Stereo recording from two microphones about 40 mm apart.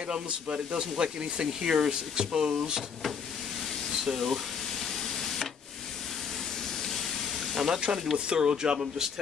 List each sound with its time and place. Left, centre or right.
0.1 s speech: right
4.0 s a sound: centre
7.5 s speech: centre
8.3 s speech: right
8.7 s speech: centre